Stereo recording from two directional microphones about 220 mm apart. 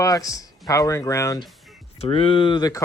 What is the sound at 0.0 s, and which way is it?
Speech, 15° left (ahead or behind).